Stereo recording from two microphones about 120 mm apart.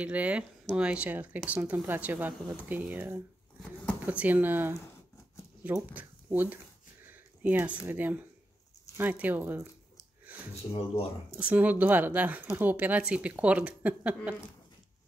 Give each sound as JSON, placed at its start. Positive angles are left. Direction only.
{"t": 0.0, "sound": "speech", "side_deg": -10}
{"t": 7.1, "sound": "a sound", "side_deg": -15}
{"t": 7.8, "sound": "speech", "side_deg": -15}
{"t": 10.7, "sound": "speech", "side_deg": 55}
{"t": 11.3, "sound": "speech", "side_deg": -10}